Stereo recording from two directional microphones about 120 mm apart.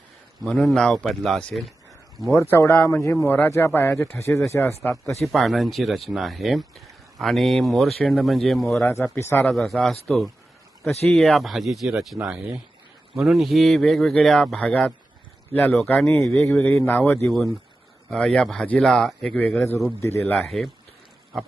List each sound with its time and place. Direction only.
0.4 s speech: centre (ahead or behind)
2.3 s speech: 25° left (ahead or behind)
5.2 s speech: centre (ahead or behind)
9.1 s speech: 20° left (ahead or behind)
9.5 s speech: centre (ahead or behind)
11.1 s speech: centre (ahead or behind)
16.0 s speech: 5° left (ahead or behind)
16.6 s speech: 20° left (ahead or behind)
17.2 s speech: centre (ahead or behind)
20.0 s speech: 20° left (ahead or behind)
20.3 s speech: 5° left (ahead or behind)